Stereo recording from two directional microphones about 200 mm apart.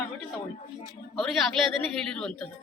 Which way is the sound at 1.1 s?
Centre (ahead or behind).